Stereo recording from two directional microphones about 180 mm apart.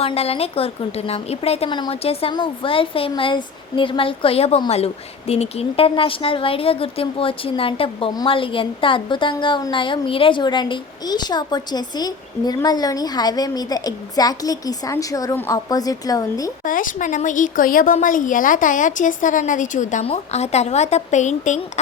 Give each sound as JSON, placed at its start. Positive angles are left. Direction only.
{"t": 0.0, "sound": "a woman's voice", "side_deg": 35}
{"t": 16.6, "sound": "a woman's voice", "side_deg": 50}